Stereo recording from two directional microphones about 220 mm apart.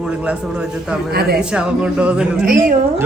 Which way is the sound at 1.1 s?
45° right (ahead or behind).